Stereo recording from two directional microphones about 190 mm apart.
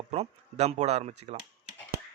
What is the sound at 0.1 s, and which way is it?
Speech, 35° right (ahead or behind).